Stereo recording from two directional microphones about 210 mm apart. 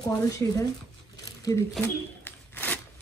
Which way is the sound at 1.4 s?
15° left (ahead or behind).